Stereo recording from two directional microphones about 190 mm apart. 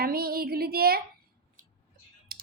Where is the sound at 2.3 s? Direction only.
50° right (ahead or behind).